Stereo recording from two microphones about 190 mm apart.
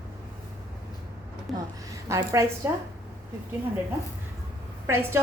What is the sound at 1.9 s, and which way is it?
Speech, 15° right (ahead or behind).